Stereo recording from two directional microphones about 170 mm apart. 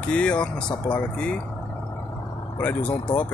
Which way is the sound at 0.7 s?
25° left (ahead or behind).